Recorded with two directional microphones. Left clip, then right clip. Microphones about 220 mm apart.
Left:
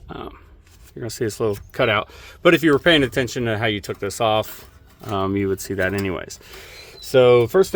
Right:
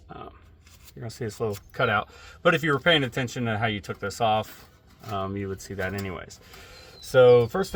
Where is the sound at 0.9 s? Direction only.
50° left (ahead or behind).